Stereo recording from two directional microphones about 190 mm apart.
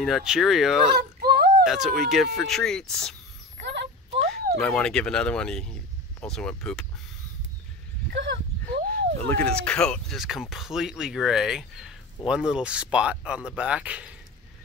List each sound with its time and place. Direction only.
0.0 s speech: centre (ahead or behind)
0.9 s whimper: 55° right (ahead or behind)
1.6 s speech: centre (ahead or behind)
3.6 s a sound: 65° right (ahead or behind)
4.3 s speech: 5° left (ahead or behind)
8.1 s speech: 70° right (ahead or behind)
9.2 s speech: 10° left (ahead or behind)